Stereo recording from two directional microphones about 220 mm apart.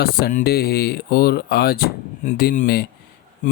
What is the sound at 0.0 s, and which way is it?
Speech, 45° left (ahead or behind).